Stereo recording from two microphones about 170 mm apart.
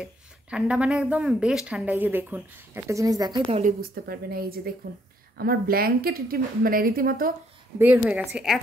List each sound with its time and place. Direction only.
0.0 s speech: 5° right (ahead or behind); by 3.4 s 25° right (ahead or behind)
3.6 s speech: 60° right (ahead or behind)
7.8 s a woman's voice: 10° right (ahead or behind)